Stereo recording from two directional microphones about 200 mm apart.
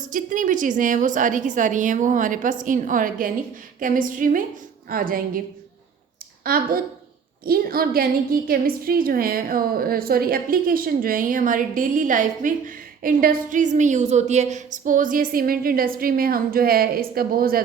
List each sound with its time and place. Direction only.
0.1 s a woman's voice: 40° right (ahead or behind)
6.4 s a woman's voice: 45° right (ahead or behind)